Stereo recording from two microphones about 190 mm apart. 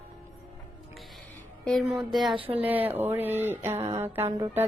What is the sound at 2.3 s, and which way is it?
Speech, 30° right (ahead or behind).